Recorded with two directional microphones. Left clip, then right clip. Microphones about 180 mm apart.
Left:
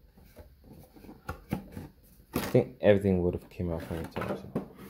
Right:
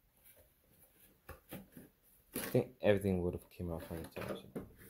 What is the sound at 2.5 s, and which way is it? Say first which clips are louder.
Speech: left 9 dB; 15° right (ahead or behind).